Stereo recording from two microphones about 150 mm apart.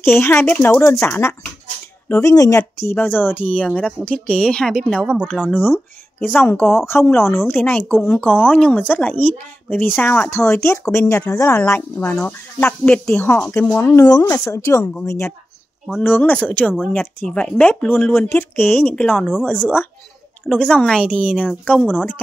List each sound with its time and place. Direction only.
0.0 s a woman's voice: 15° left (ahead or behind); by 5.7 s 5° right (ahead or behind)
5.7 s speech: 10° left (ahead or behind)
19.1 s a woman's voice: 5° right (ahead or behind)
20.4 s speech: 5° left (ahead or behind)
21.3 s a woman's voice: 5° right (ahead or behind)